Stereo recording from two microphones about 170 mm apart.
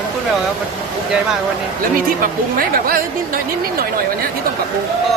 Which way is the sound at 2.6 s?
60° right (ahead or behind).